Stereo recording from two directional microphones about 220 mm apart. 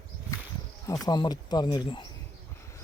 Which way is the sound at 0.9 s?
15° left (ahead or behind).